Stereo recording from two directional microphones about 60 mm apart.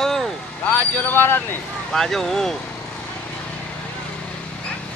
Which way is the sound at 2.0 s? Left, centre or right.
Centre.